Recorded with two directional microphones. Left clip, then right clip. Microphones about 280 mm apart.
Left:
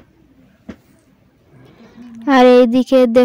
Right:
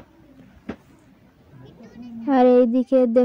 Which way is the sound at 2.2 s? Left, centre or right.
Left.